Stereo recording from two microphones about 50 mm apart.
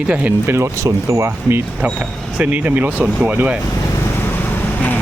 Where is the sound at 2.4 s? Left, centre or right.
Right.